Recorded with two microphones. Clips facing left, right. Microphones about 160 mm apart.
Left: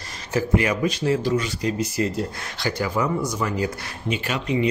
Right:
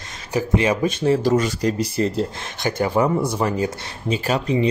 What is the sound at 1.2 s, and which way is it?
Speech, 45° right (ahead or behind).